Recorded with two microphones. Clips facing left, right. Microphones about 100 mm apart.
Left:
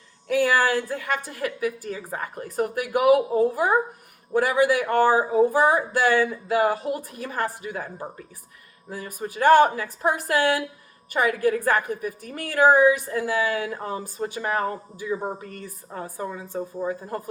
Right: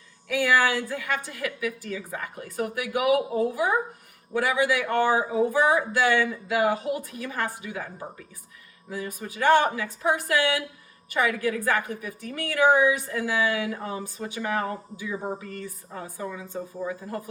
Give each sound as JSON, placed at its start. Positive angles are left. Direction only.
{"t": 0.3, "sound": "a sound", "side_deg": 40}
{"t": 0.9, "sound": "a woman's voice", "side_deg": 45}
{"t": 8.9, "sound": "a woman's voice", "side_deg": 40}